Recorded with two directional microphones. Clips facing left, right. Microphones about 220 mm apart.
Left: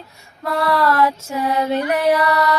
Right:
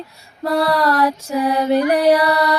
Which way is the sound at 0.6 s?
15° right (ahead or behind).